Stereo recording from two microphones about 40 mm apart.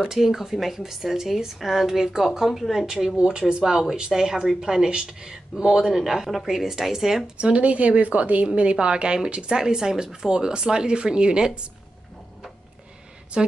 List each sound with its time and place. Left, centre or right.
0.1 s speech: centre
3.2 s speech: right
7.3 s speech: right
13.3 s speech: right